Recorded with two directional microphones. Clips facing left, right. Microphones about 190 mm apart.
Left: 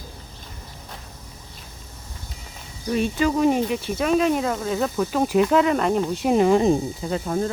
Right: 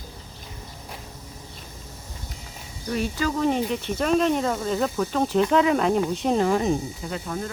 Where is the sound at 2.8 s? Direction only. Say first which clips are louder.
Left 4 dB; 20° left (ahead or behind); by 6.3 s 5° left (ahead or behind).